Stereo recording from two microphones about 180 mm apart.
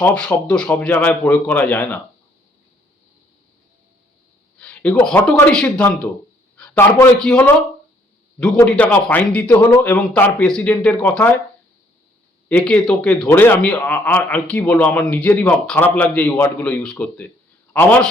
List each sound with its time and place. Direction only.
0.0 s a man's voice: 5° left (ahead or behind)
4.6 s a sound: 5° left (ahead or behind)
5.0 s a man's voice: 5° left (ahead or behind)
8.6 s a man's voice: 5° left (ahead or behind)
12.5 s a man's voice: 5° left (ahead or behind)